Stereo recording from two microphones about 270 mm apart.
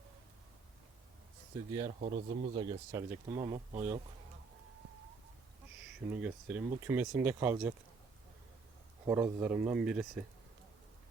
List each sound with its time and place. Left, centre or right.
2.0 s speech: right
6.1 s speech: centre
9.0 s speech: centre